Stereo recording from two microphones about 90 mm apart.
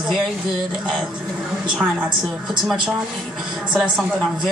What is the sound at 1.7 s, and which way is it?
Speech, 20° right (ahead or behind).